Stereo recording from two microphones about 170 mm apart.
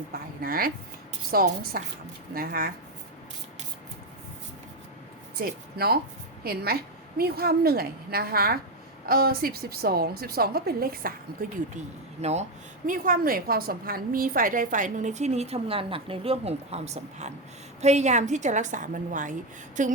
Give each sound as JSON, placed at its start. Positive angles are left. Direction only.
{"t": 0.1, "sound": "a woman's voice", "side_deg": -60}
{"t": 5.4, "sound": "a woman's voice", "side_deg": -65}
{"t": 12.2, "sound": "a woman's voice", "side_deg": -40}